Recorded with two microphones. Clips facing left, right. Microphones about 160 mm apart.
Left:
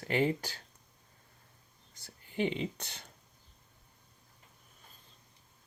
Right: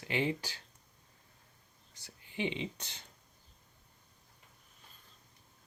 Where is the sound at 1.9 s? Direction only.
45° left (ahead or behind).